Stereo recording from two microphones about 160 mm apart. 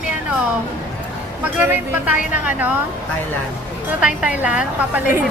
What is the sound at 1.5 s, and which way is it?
Speech, 10° right (ahead or behind).